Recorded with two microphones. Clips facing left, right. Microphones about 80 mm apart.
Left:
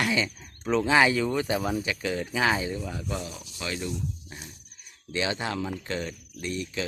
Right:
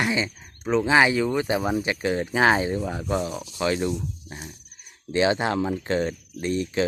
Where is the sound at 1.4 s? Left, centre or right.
Right.